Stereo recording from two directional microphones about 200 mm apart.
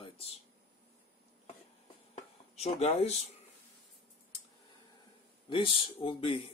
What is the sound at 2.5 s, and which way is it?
Speech, 30° left (ahead or behind).